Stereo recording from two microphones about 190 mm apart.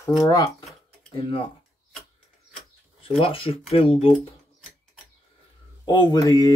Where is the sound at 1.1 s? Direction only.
25° left (ahead or behind).